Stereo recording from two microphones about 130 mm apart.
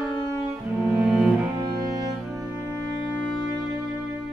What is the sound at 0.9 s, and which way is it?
Cello, 5° right (ahead or behind).